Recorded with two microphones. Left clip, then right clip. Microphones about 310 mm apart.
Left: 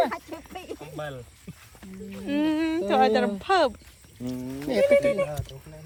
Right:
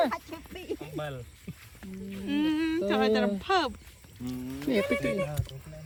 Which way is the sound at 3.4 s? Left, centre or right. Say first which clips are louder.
Left 5 dB; centre.